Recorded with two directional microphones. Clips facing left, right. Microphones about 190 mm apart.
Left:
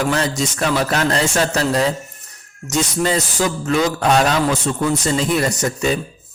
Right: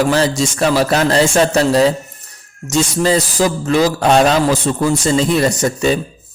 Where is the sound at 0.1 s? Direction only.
30° right (ahead or behind).